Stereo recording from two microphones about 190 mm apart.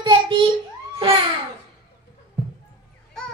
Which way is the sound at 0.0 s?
25° right (ahead or behind).